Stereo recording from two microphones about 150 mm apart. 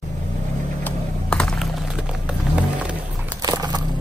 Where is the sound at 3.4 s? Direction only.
25° right (ahead or behind).